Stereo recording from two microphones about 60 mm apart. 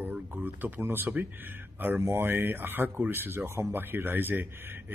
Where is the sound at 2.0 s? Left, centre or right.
Right.